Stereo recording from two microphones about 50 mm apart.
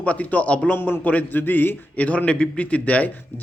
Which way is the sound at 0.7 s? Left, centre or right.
Left.